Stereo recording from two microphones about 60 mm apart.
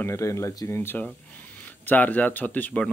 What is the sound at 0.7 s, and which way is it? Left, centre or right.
Speech, left.